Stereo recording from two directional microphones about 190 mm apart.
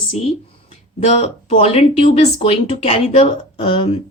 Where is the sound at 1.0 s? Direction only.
35° left (ahead or behind).